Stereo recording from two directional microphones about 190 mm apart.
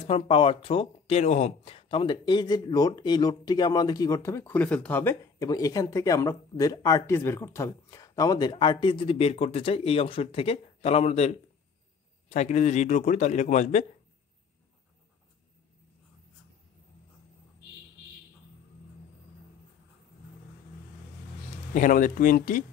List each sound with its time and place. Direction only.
0.0 s a man's voice: 30° left (ahead or behind)
21.7 s speech: 45° left (ahead or behind)